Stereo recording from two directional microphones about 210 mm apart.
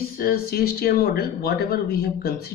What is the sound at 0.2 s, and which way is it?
Speech, 45° left (ahead or behind).